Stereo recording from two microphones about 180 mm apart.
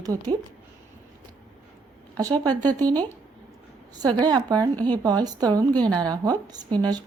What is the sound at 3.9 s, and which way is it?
Speech, 25° right (ahead or behind).